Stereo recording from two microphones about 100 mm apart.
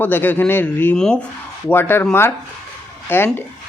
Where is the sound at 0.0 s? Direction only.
20° left (ahead or behind).